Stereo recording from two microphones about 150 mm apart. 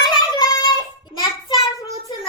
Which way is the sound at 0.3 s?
30° left (ahead or behind).